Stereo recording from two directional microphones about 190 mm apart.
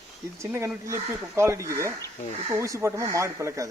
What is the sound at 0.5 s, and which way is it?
A man's voice, 15° right (ahead or behind).